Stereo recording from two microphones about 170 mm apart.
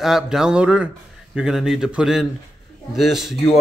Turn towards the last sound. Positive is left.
turn(degrees=0)  # may be behind; listen again after turning